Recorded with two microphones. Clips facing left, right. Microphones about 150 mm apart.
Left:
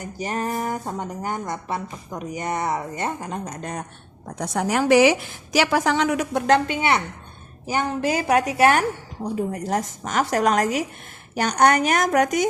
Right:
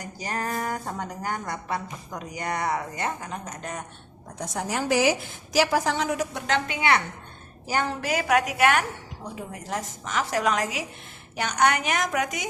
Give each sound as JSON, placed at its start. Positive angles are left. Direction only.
{"t": 0.0, "sound": "a woman's voice", "side_deg": 25}
{"t": 4.4, "sound": "a woman's voice", "side_deg": 75}
{"t": 6.7, "sound": "speech", "side_deg": 25}
{"t": 8.0, "sound": "a woman's voice", "side_deg": 30}